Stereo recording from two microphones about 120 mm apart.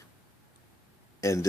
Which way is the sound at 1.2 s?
25° left (ahead or behind).